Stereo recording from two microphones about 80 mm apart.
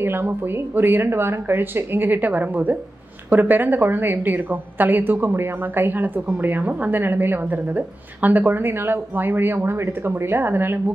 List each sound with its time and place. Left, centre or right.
0.0 s a woman's voice: right